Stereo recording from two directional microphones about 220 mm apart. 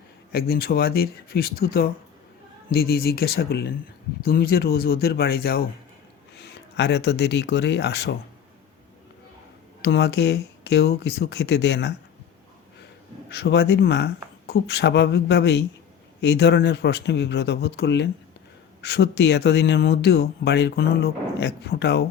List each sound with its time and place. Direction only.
0.3 s speech: 45° left (ahead or behind)
9.8 s speech: 50° left (ahead or behind)
13.3 s speech: 50° left (ahead or behind)